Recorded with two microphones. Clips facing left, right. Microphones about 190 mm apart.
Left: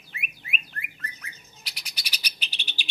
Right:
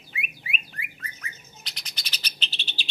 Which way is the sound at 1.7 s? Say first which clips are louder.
Left 1 dB; 10° left (ahead or behind).